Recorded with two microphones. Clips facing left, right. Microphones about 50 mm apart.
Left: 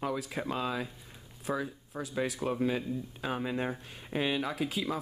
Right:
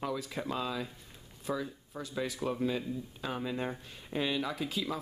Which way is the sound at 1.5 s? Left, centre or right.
Left.